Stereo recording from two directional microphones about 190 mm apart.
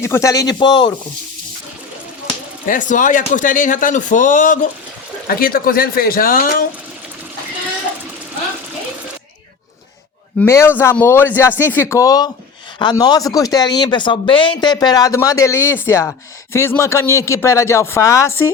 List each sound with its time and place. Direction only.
0.0 s speech: 15° left (ahead or behind)
2.6 s speech: 45° left (ahead or behind)
10.4 s speech: 15° left (ahead or behind)